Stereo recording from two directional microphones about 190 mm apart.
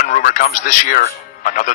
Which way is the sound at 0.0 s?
45° left (ahead or behind).